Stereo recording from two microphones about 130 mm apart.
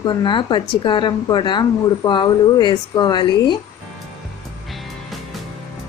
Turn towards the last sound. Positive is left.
turn(degrees=0)  # may be behind; listen again after turning